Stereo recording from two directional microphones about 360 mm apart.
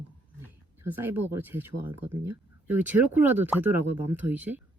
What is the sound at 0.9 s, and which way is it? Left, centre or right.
Speech, centre.